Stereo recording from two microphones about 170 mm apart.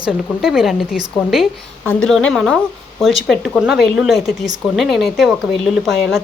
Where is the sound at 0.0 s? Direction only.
5° right (ahead or behind).